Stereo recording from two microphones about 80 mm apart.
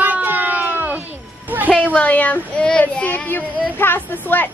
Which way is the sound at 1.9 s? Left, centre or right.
Centre.